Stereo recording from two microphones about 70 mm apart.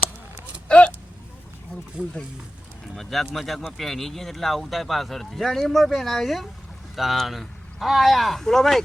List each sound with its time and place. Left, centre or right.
0.7 s a sound: centre
2.0 s speech: centre
2.9 s speech: centre